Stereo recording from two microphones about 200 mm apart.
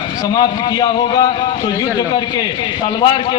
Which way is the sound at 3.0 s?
20° left (ahead or behind).